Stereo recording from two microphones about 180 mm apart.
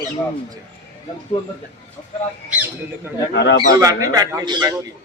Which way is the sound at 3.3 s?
70° left (ahead or behind).